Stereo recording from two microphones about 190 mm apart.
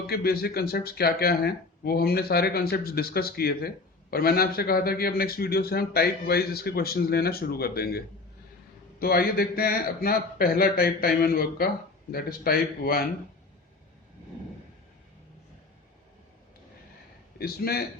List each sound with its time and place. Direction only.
0.1 s a man's voice: 55° left (ahead or behind)
17.3 s speech: 55° left (ahead or behind)